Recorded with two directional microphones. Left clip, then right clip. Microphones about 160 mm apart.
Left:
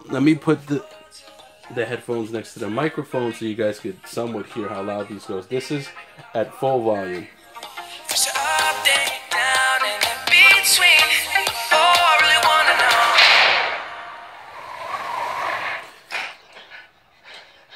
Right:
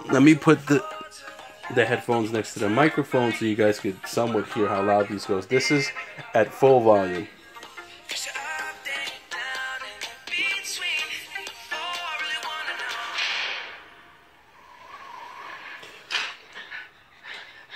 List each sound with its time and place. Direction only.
0.1 s speech: 15° right (ahead or behind)
1.7 s speech: 35° right (ahead or behind)
3.1 s speech: 75° right (ahead or behind)
3.3 s a man's voice: 25° right (ahead or behind)
4.6 s speech: 40° right (ahead or behind)
5.5 s a man's voice: 25° right (ahead or behind)
7.6 s music: 85° left
8.5 s music: 45° left (ahead or behind)
8.9 s music: 75° left (ahead or behind)
14.7 s vehicle: 60° left (ahead or behind)